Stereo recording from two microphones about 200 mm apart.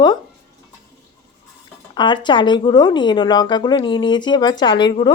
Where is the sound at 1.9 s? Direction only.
20° left (ahead or behind).